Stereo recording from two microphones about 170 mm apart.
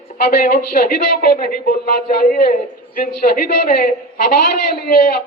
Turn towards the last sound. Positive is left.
turn(degrees=65)  # may be behind; listen again after turning